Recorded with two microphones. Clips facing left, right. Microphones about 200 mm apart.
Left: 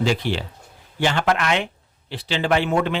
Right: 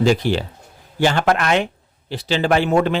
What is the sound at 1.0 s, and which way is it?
Speech, 40° right (ahead or behind).